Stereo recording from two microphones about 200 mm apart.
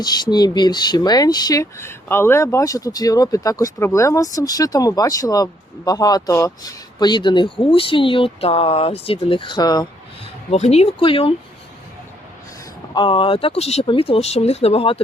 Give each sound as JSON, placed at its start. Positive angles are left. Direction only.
{"t": 0.0, "sound": "speech", "side_deg": 20}
{"t": 10.5, "sound": "speech", "side_deg": 30}
{"t": 12.9, "sound": "speech", "side_deg": 25}